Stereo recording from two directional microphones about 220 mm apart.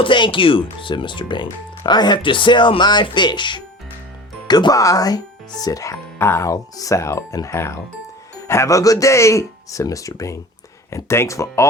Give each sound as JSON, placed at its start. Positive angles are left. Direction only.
{"t": 0.0, "sound": "speech", "side_deg": 20}